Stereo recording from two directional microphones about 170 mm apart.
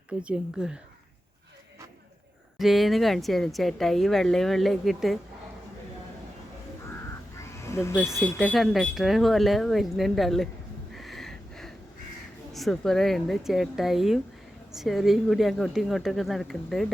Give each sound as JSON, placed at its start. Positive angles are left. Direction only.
{"t": 0.2, "sound": "speech", "side_deg": -5}
{"t": 2.6, "sound": "speech", "side_deg": 0}
{"t": 7.3, "sound": "a sound", "side_deg": 15}
{"t": 8.1, "sound": "speech", "side_deg": 0}
{"t": 10.9, "sound": "a sound", "side_deg": 0}
{"t": 12.5, "sound": "speech", "side_deg": 0}